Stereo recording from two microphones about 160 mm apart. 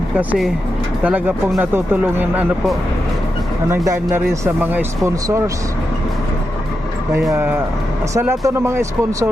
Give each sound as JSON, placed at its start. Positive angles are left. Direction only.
{"t": 0.2, "sound": "speech", "side_deg": -5}
{"t": 3.8, "sound": "speech", "side_deg": -15}
{"t": 7.3, "sound": "speech", "side_deg": -15}